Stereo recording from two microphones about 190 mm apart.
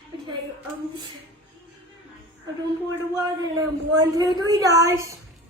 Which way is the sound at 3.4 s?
20° right (ahead or behind).